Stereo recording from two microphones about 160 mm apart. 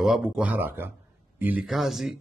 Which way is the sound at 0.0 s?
5° right (ahead or behind).